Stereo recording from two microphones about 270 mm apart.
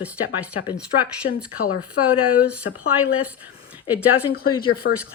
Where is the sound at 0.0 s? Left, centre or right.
Centre.